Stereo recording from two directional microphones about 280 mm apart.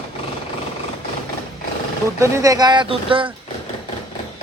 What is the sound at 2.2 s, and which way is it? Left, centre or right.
Speech, centre.